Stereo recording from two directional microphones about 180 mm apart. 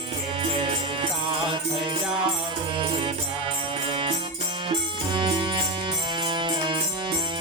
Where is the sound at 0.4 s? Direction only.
30° right (ahead or behind).